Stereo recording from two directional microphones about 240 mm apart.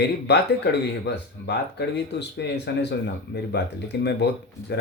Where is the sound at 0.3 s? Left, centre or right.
Left.